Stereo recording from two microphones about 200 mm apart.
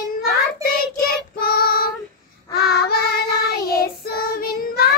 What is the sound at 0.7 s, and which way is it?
Child singing, 45° left (ahead or behind).